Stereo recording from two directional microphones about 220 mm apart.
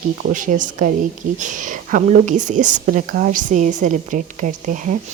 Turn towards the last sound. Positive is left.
turn(degrees=-35)  # may be behind; listen again after turning